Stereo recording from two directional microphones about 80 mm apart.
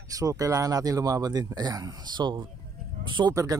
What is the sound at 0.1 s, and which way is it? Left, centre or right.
Speech, right.